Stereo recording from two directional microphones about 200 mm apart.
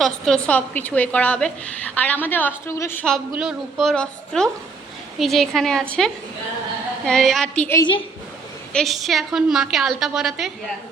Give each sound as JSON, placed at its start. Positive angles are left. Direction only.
{"t": 0.0, "sound": "a woman's voice", "side_deg": 5}
{"t": 7.0, "sound": "a woman's voice", "side_deg": 0}
{"t": 7.8, "sound": "a woman's voice", "side_deg": 25}
{"t": 8.7, "sound": "a woman's voice", "side_deg": 0}